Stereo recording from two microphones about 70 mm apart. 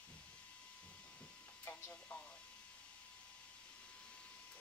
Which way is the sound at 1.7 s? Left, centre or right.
Left.